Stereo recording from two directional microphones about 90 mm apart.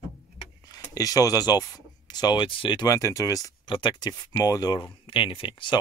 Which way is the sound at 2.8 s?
35° left (ahead or behind).